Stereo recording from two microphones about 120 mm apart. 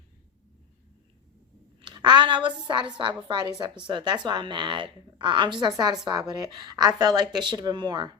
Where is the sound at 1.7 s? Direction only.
40° right (ahead or behind).